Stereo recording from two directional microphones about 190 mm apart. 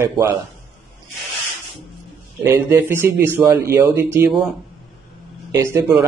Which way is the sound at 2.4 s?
10° right (ahead or behind).